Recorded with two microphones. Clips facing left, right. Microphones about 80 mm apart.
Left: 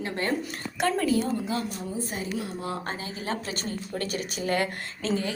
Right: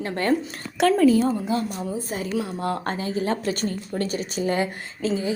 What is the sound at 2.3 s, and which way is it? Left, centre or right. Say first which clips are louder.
Speech: right 6 dB; right.